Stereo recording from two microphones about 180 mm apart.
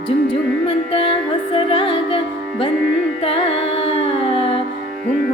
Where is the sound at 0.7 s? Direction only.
30° left (ahead or behind).